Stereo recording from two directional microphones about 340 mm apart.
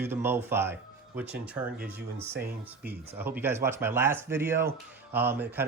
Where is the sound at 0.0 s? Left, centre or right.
Centre.